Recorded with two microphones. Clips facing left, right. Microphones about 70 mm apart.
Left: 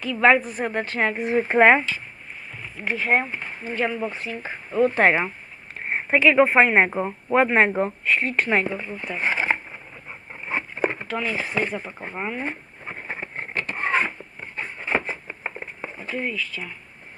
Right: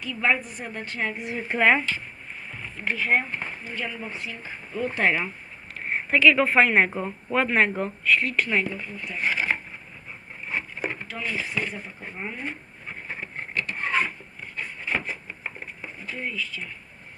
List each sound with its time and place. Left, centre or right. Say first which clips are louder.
0.1 s a woman's voice: left 7 dB; left
1.1 s speech: left 9 dB; left
2.9 s speech: left 2 dB; left
3.6 s speech: left 8 dB; left
5.9 s speech: left 1 dB; left
10.4 s patter: left 5 dB; left
11.3 s speech: left 2 dB; left
12.1 s a woman's voice: left 6 dB; left
12.4 s a sound: left 4 dB; left
16.1 s speech: left 4 dB; left